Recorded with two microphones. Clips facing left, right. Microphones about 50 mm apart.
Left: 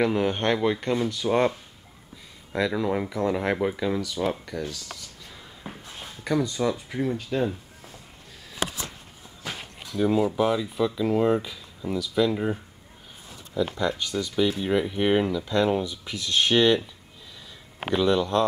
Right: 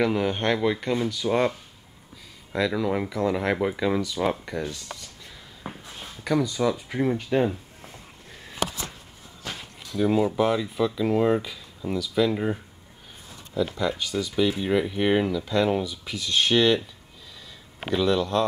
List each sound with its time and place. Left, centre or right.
0.0 s speech: centre
2.5 s speech: centre
5.6 s a sound: centre
6.6 s speech: centre
7.0 s speech: right
9.4 s a sound: centre
10.0 s speech: centre
13.7 s speech: centre
17.9 s a man's voice: centre